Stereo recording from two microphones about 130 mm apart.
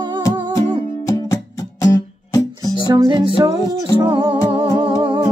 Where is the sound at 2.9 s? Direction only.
35° right (ahead or behind).